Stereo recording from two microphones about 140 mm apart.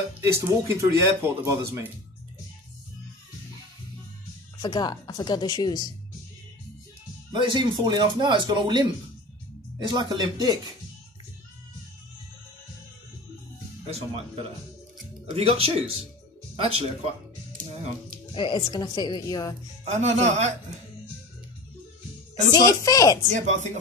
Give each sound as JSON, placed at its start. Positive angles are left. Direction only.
{"t": 0.2, "sound": "speech", "side_deg": -20}
{"t": 4.6, "sound": "speech", "side_deg": 30}
{"t": 7.3, "sound": "speech", "side_deg": -35}
{"t": 9.8, "sound": "speech", "side_deg": -30}
{"t": 13.8, "sound": "speech", "side_deg": -45}
{"t": 18.3, "sound": "speech", "side_deg": 35}
{"t": 19.9, "sound": "speech", "side_deg": -55}
{"t": 22.5, "sound": "speech", "side_deg": 25}
{"t": 23.3, "sound": "speech", "side_deg": -60}